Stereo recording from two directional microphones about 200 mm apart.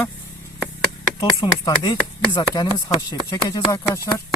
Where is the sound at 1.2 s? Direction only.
20° left (ahead or behind).